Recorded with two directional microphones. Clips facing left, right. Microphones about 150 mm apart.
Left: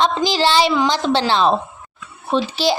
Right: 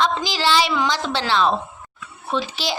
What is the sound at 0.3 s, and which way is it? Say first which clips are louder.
A child's voice: left 4 dB; 30° left (ahead or behind).